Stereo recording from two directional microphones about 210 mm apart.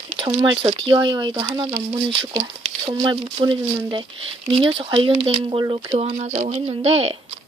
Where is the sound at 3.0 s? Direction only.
20° right (ahead or behind).